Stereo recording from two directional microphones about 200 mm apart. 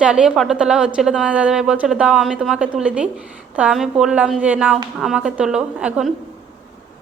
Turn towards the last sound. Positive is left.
turn(degrees=-5)  # may be behind; listen again after turning